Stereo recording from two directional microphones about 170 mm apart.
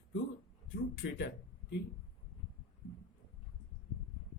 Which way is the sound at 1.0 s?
90° left.